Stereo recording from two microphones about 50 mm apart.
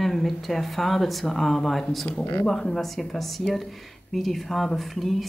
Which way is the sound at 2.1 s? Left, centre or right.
Left.